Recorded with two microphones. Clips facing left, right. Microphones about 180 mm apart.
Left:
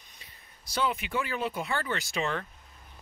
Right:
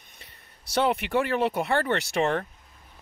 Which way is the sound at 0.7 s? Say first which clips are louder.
Right 6 dB; 65° right (ahead or behind).